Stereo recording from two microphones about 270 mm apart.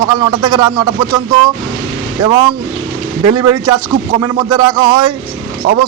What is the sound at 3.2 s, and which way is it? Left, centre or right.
Speech, centre.